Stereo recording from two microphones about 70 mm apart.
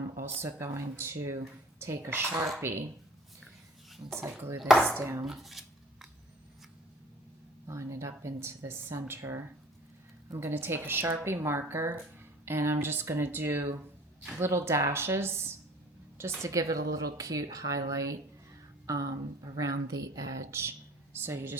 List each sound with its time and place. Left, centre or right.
0.4 s speech: right
4.1 s speech: right
5.2 s cutlery: centre
7.7 s speech: right
20.5 s speech: right